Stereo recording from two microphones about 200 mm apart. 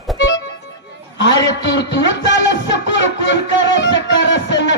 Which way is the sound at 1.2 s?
65° left (ahead or behind).